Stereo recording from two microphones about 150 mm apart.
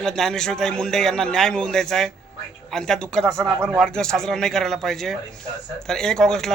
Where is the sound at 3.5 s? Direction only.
15° right (ahead or behind).